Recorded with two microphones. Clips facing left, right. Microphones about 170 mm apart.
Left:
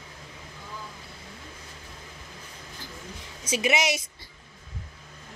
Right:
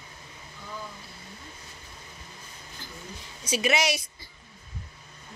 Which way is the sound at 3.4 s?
20° left (ahead or behind).